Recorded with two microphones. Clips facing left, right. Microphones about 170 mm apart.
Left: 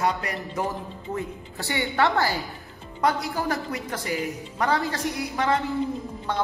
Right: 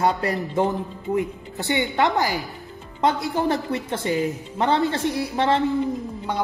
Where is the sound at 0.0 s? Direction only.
30° right (ahead or behind).